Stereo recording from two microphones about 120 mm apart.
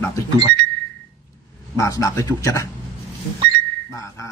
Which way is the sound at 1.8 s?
25° left (ahead or behind).